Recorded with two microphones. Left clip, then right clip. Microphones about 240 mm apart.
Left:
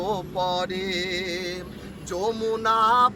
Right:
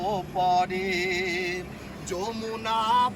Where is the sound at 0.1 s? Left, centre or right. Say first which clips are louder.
Right 4 dB; left.